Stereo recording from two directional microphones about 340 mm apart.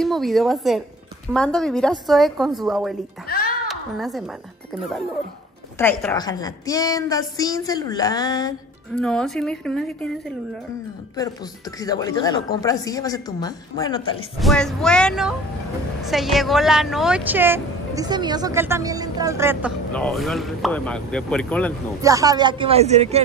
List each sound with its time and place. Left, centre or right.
0.0 s speech: centre
3.3 s a sound: left
3.6 s a sound: centre
5.8 s a woman's voice: centre
11.8 s a woman's voice: centre
14.4 s speech: centre
22.0 s speech: centre